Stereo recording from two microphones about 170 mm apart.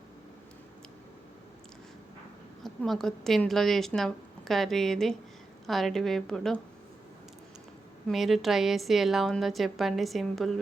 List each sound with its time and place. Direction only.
2.6 s a woman's voice: centre (ahead or behind)
8.0 s a woman's voice: centre (ahead or behind)